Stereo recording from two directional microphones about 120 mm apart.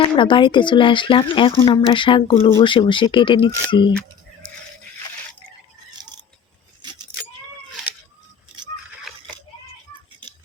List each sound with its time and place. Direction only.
0.0 s speech: 45° left (ahead or behind)